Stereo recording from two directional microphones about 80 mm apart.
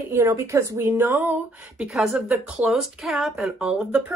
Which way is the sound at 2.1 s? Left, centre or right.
Centre.